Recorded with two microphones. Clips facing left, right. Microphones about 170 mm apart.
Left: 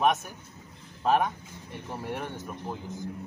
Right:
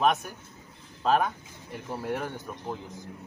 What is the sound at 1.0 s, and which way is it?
Speech, 10° left (ahead or behind).